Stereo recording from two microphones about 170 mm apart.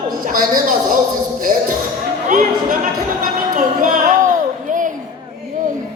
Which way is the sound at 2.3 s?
50° right (ahead or behind).